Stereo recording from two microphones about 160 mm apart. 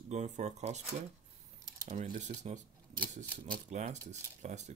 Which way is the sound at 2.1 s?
50° right (ahead or behind).